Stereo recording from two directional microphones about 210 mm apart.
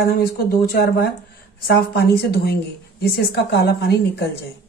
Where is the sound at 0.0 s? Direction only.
45° left (ahead or behind).